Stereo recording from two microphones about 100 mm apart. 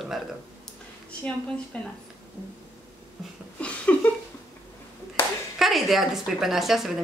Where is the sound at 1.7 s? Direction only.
15° left (ahead or behind).